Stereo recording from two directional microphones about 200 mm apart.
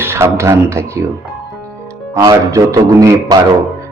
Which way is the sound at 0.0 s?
10° right (ahead or behind).